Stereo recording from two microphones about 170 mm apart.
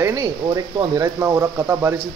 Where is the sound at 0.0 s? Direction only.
15° right (ahead or behind).